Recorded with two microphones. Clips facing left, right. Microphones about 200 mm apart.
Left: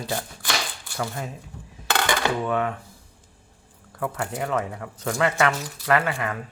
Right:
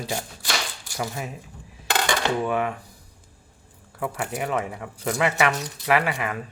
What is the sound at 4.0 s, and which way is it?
Speech, 10° right (ahead or behind).